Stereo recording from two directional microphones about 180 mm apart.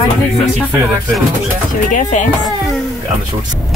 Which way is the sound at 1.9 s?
45° left (ahead or behind).